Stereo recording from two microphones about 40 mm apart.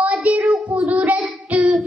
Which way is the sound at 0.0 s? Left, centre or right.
Right.